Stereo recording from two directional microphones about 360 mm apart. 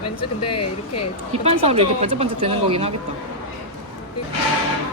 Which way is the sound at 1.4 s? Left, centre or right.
Centre.